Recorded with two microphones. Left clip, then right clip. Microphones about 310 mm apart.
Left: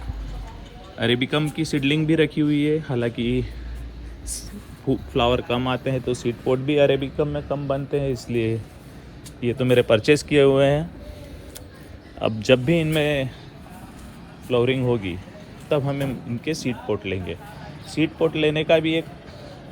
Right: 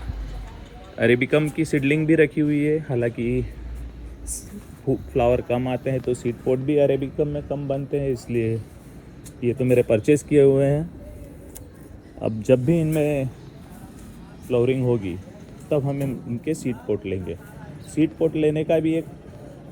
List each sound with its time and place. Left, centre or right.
0.9 s speech: centre
4.9 s speech: centre
12.5 s speech: left
14.5 s speech: centre